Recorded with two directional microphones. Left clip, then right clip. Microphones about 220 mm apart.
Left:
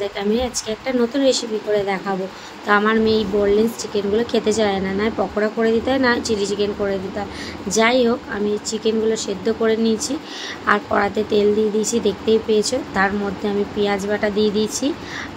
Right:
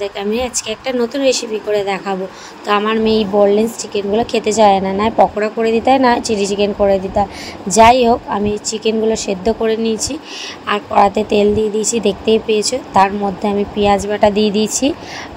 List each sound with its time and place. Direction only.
0.0 s a woman's voice: 20° right (ahead or behind)